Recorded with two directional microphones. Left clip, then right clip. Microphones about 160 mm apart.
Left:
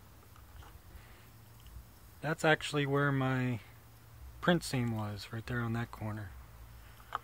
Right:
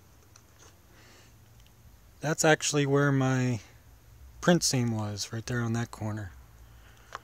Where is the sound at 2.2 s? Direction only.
70° right (ahead or behind).